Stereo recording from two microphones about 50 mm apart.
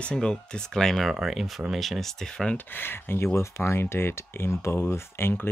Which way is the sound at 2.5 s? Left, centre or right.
Left.